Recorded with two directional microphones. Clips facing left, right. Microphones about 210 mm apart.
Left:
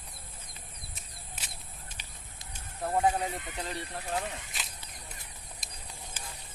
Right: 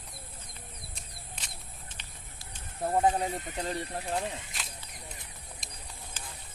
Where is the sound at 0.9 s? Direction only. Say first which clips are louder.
Right 1 dB; 5° left (ahead or behind).